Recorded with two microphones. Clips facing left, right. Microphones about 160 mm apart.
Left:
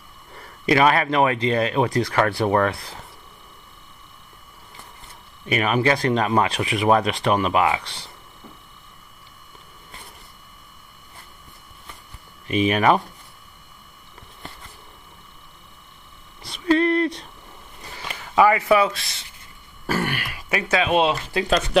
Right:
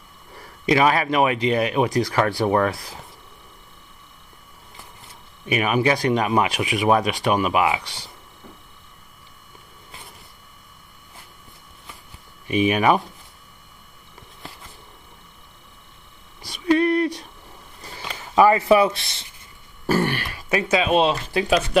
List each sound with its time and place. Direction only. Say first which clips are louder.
0.3 s speech: even; 10° right (ahead or behind)
5.4 s speech: even; 10° right (ahead or behind)
12.5 s speech: even; 10° right (ahead or behind)
14.4 s a sound: even; centre (ahead or behind)
16.6 s a sound: even; 15° right (ahead or behind)
18.1 s speech: right 1 dB; 20° right (ahead or behind)
19.9 s throat clearing: right 4 dB; 30° right (ahead or behind)
20.3 s a sound: right 4 dB; 30° right (ahead or behind)
20.9 s speech: right 1 dB; 15° left (ahead or behind)